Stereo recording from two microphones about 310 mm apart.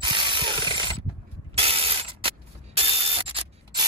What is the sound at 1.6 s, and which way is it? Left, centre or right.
Spray, centre.